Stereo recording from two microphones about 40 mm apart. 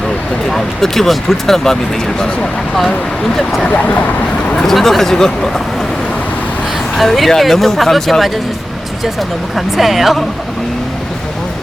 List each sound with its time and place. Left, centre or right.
0.4 s speech: centre
3.3 s speech: centre
3.7 s speech: left
4.5 s speech: centre
6.9 s speech: centre
9.6 s speech: centre